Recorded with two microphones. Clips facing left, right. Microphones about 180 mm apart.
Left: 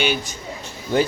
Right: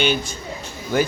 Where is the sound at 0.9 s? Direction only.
25° left (ahead or behind).